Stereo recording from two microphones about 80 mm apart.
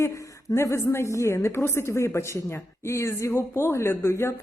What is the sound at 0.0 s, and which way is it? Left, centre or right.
A woman's voice, left.